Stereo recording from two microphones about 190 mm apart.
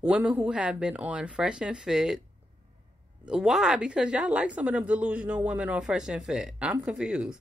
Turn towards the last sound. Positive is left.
turn(degrees=-5)  # may be behind; listen again after turning